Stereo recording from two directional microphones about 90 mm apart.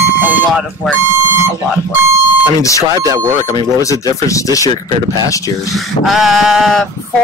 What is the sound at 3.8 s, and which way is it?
Speech, 35° left (ahead or behind).